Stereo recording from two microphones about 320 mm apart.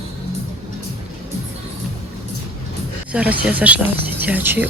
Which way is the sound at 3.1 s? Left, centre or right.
Centre.